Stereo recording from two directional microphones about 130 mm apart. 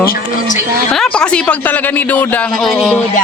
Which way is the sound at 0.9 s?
5° left (ahead or behind).